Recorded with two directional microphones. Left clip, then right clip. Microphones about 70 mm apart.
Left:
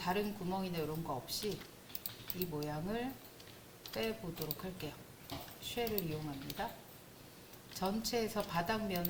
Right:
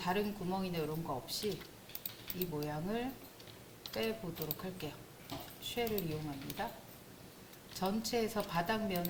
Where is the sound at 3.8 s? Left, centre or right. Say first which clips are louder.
Right 1 dB; left.